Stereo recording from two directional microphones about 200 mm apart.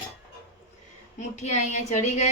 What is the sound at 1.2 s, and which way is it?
A woman's voice, 35° left (ahead or behind).